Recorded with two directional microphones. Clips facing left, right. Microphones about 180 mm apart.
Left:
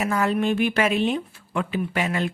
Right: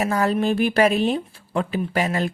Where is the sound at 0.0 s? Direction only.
35° right (ahead or behind).